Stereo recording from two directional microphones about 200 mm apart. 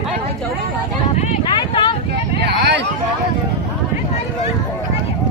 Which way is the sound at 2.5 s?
55° right (ahead or behind).